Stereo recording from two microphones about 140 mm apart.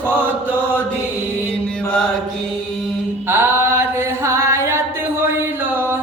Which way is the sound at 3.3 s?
15° right (ahead or behind).